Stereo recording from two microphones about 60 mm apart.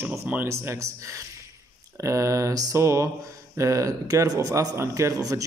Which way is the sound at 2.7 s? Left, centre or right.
Right.